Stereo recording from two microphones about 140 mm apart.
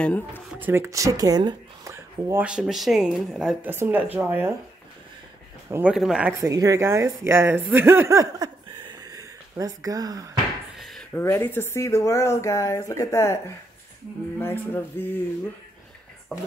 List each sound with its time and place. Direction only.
0.3 s speech: 10° right (ahead or behind)
2.4 s speech: 5° right (ahead or behind)
3.6 s speech: 15° right (ahead or behind)
5.7 s speech: 15° right (ahead or behind)
6.4 s speech: 25° right (ahead or behind)
10.8 s a sound: centre (ahead or behind)
11.1 s speech: 15° left (ahead or behind)
14.4 s music: 15° left (ahead or behind)